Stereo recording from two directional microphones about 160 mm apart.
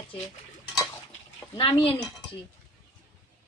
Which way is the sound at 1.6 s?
35° left (ahead or behind).